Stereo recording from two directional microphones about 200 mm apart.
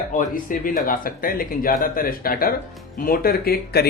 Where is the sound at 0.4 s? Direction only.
45° left (ahead or behind).